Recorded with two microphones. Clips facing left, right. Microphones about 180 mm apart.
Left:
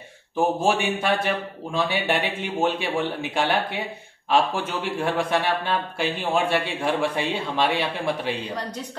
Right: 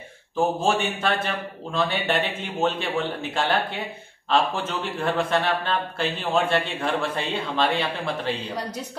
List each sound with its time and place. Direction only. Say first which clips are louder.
0.4 s speech: left 1 dB; 15° left (ahead or behind)
4.9 s speech: even; 10° left (ahead or behind)